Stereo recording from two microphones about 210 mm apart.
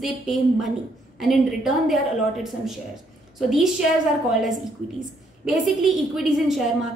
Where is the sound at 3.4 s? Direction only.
Centre (ahead or behind).